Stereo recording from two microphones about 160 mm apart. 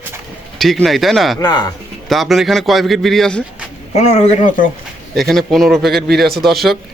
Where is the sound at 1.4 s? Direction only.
25° left (ahead or behind).